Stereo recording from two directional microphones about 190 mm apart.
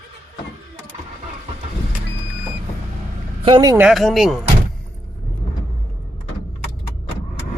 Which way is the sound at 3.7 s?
5° right (ahead or behind).